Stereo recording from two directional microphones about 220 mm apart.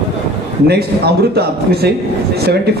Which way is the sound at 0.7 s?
45° right (ahead or behind).